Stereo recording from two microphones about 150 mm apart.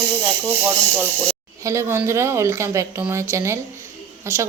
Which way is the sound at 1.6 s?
20° right (ahead or behind).